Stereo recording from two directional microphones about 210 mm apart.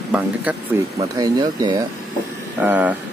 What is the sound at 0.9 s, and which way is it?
Speech, 20° right (ahead or behind).